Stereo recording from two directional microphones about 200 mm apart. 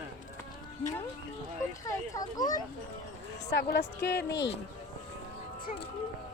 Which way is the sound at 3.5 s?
55° left (ahead or behind).